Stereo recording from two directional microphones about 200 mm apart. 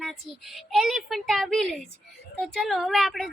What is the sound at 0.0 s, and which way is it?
A woman's voice, centre (ahead or behind).